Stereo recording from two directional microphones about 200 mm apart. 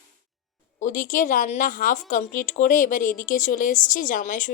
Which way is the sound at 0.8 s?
40° left (ahead or behind).